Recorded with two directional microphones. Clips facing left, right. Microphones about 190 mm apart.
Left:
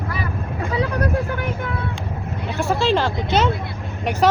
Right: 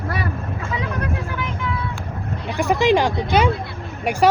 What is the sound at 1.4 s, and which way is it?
Speech, 50° left (ahead or behind).